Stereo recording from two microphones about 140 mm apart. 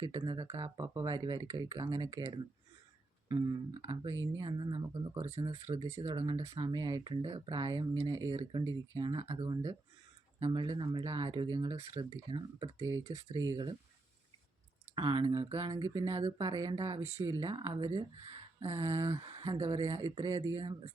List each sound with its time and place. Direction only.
0.0 s speech: 30° right (ahead or behind)
5.1 s speech: 50° right (ahead or behind)
5.4 s speech: 35° right (ahead or behind)
6.6 s speech: 30° right (ahead or behind)
14.9 s speech: 35° right (ahead or behind)
15.7 s speech: 25° right (ahead or behind)
16.0 s speech: 35° right (ahead or behind)